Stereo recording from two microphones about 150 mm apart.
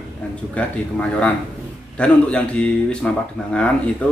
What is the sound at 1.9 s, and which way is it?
Speech, 10° left (ahead or behind).